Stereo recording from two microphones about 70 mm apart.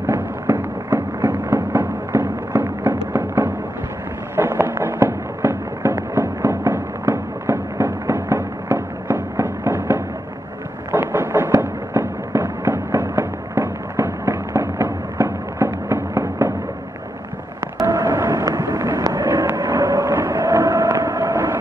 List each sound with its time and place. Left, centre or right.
0.0 s fireworks: right
10.9 s thunder: right
11.5 s fireworks: right
17.8 s a sound: right
19.2 s vehicle: right
19.5 s vehicle: right
20.1 s a sound: right
20.4 s vehicle: right